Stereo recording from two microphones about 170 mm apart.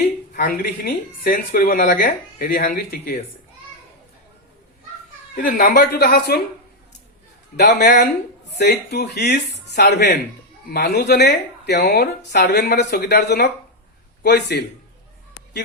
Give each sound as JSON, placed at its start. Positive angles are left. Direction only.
{"t": 0.0, "sound": "speech", "side_deg": 60}
{"t": 5.4, "sound": "speech", "side_deg": 60}
{"t": 7.5, "sound": "speech", "side_deg": 75}
{"t": 12.5, "sound": "a man's voice", "side_deg": 70}